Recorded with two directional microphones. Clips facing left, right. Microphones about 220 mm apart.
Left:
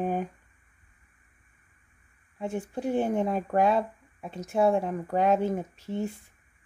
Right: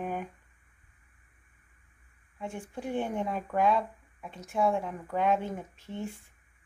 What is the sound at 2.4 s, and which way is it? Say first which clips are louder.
Speech: left 6 dB; 40° left (ahead or behind).